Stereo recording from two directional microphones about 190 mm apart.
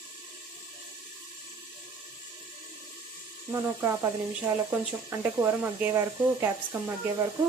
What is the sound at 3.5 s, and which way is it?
Speech, 10° right (ahead or behind).